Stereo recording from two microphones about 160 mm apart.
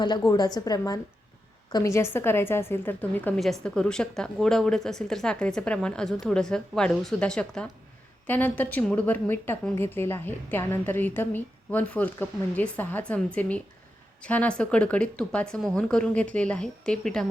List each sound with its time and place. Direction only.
0.0 s a woman's voice: 25° left (ahead or behind); by 17.2 s 5° left (ahead or behind)